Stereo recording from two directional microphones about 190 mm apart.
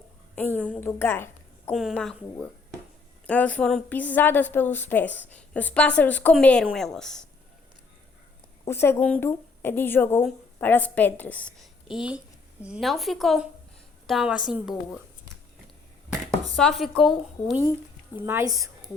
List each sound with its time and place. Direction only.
0.3 s a woman's voice: 10° left (ahead or behind)
1.7 s a woman's voice: centre (ahead or behind)
8.6 s a woman's voice: 15° left (ahead or behind)
16.6 s a woman's voice: centre (ahead or behind)
18.2 s a woman's voice: 15° right (ahead or behind)